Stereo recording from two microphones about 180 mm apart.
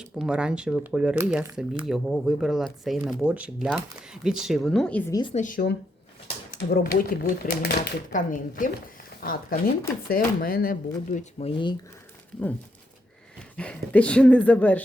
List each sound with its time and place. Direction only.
0.0 s speech: 5° right (ahead or behind)
5.3 s speech: 45° left (ahead or behind)
8.3 s speech: 50° left (ahead or behind)
11.3 s speech: 30° left (ahead or behind)
13.6 s speech: 5° left (ahead or behind)